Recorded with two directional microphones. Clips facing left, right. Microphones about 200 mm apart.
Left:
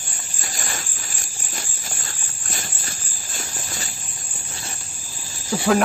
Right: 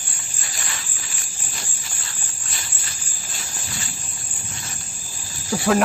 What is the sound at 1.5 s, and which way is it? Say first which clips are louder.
Cricket: left 4 dB; 45° left (ahead or behind).